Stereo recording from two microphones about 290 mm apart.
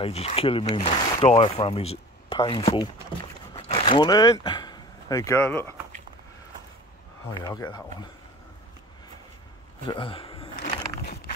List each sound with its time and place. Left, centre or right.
0.0 s speech: left
7.4 s speech: centre
9.8 s a sound: centre